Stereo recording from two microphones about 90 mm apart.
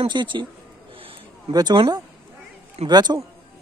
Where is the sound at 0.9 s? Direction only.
80° right.